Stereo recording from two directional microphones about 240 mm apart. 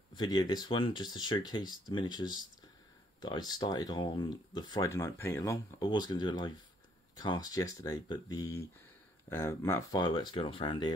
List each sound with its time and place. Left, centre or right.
0.1 s speech: centre